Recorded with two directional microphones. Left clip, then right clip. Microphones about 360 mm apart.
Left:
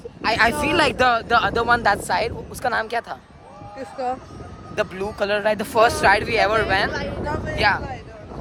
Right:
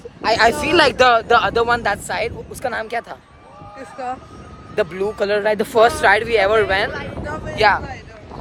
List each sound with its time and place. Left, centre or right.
0.2 s speech: centre
3.8 s speech: left
4.7 s speech: centre
6.9 s vehicle: left
7.5 s speech: centre